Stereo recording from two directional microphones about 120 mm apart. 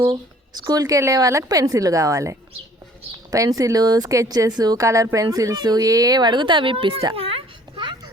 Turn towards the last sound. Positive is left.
turn(degrees=-45)  # may be behind; listen again after turning